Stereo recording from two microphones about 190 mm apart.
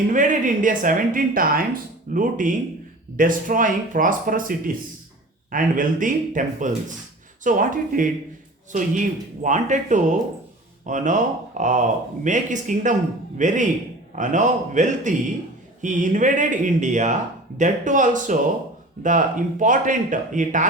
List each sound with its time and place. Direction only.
0.1 s speech: 45° right (ahead or behind)